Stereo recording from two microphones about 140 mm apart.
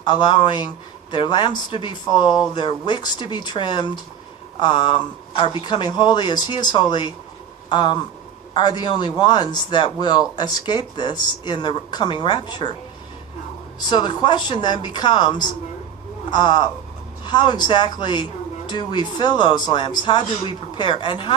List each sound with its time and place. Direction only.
0.0 s speech: 35° left (ahead or behind)
13.7 s speech: 35° left (ahead or behind)